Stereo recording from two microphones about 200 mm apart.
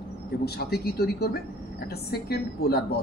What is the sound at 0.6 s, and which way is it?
A man's voice, 50° left (ahead or behind).